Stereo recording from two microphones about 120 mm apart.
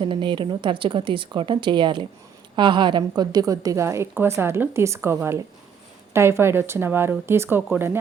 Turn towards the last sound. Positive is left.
turn(degrees=-20)  # may be behind; listen again after turning